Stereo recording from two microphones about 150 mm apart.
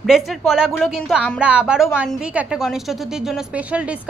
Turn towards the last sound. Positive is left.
turn(degrees=-10)  # may be behind; listen again after turning